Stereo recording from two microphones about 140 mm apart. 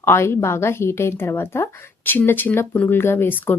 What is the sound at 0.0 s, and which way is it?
A woman's voice, 15° left (ahead or behind).